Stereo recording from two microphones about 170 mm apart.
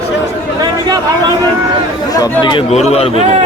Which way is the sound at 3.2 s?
40° right (ahead or behind).